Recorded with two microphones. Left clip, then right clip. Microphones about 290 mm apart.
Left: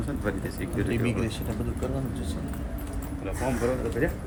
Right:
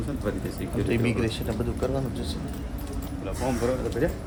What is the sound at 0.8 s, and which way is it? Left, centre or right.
Speech, right.